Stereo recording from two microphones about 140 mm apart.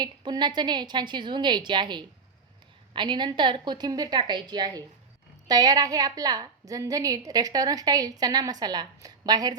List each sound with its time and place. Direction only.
0.0 s a woman's voice: 30° right (ahead or behind)